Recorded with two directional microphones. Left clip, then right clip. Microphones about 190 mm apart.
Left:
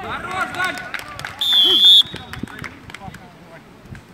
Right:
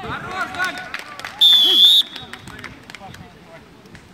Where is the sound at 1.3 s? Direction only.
20° right (ahead or behind).